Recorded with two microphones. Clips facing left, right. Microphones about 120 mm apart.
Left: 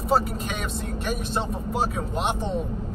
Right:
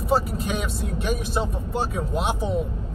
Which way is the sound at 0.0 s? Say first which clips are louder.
Even; centre (ahead or behind).